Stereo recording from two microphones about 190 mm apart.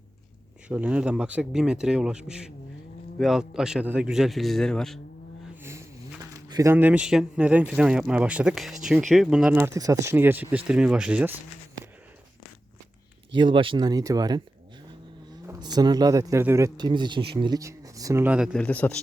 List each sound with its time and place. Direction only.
0.7 s speech: 5° right (ahead or behind)
6.5 s speech: 15° right (ahead or behind)
13.3 s speech: 25° right (ahead or behind)
15.4 s speech: 20° right (ahead or behind); by 18.9 s 5° left (ahead or behind)